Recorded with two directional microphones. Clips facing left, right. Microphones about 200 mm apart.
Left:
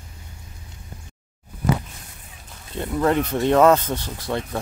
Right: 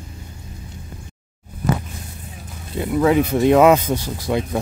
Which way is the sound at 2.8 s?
5° right (ahead or behind).